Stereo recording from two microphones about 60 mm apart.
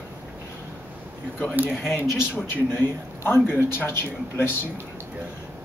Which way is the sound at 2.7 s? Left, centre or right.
Left.